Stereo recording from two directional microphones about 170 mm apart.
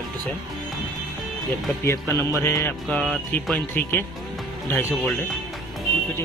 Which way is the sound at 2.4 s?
15° left (ahead or behind).